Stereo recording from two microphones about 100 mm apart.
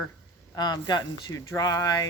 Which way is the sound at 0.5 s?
45° left (ahead or behind).